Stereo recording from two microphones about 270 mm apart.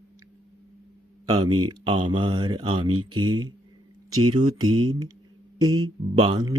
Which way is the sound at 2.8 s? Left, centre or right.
Right.